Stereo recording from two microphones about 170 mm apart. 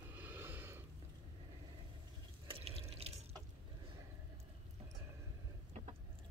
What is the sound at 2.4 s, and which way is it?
Drip, 35° right (ahead or behind).